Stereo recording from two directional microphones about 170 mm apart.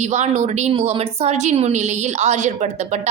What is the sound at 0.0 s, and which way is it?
A woman's voice, 40° right (ahead or behind).